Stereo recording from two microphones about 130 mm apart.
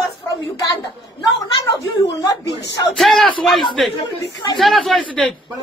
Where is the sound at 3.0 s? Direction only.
Centre (ahead or behind).